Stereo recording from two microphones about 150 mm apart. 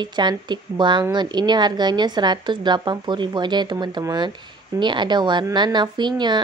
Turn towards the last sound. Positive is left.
turn(degrees=-30)  # may be behind; listen again after turning